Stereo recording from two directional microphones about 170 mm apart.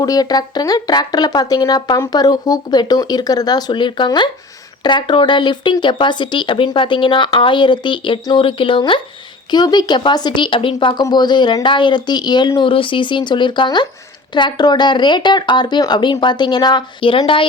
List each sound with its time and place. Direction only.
0.0 s speech: 20° left (ahead or behind)